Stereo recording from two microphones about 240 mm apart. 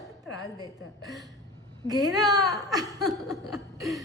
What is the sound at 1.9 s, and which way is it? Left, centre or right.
Speech, centre.